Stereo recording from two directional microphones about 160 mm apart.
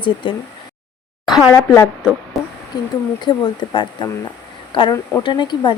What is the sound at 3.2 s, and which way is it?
Speech, 30° left (ahead or behind).